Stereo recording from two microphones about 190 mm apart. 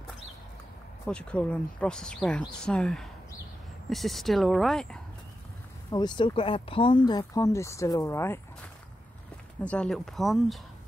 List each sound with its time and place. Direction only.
1.0 s speech: 5° left (ahead or behind)
5.9 s speech: 20° left (ahead or behind)
9.6 s speech: 5° left (ahead or behind)